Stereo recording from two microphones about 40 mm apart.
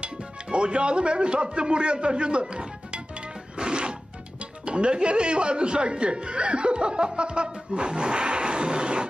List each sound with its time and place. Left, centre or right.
0.0 s speech: right
3.5 s music: right
4.6 s speech: right